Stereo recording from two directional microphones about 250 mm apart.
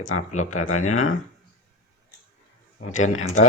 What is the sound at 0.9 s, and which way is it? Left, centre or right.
Speech, left.